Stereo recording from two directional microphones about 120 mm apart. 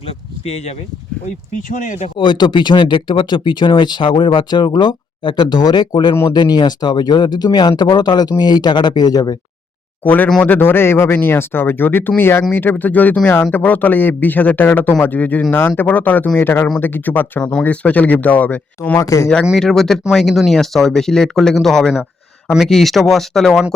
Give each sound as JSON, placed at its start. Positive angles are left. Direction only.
{"t": 0.1, "sound": "speech", "side_deg": 60}
{"t": 1.7, "sound": "speech", "side_deg": 85}
{"t": 2.1, "sound": "speech", "side_deg": 40}
{"t": 10.0, "sound": "speech", "side_deg": 15}
{"t": 10.2, "sound": "speech", "side_deg": 5}
{"t": 10.5, "sound": "speech", "side_deg": 20}
{"t": 18.9, "sound": "speech", "side_deg": 25}
{"t": 19.5, "sound": "speech", "side_deg": 5}